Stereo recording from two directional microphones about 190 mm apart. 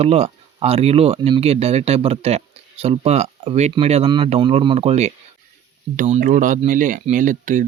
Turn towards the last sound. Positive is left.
turn(degrees=-45)  # may be behind; listen again after turning